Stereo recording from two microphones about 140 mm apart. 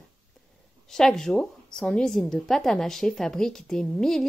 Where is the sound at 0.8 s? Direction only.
5° left (ahead or behind).